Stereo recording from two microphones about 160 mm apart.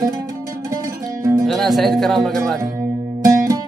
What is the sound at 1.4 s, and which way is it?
Speech, centre (ahead or behind).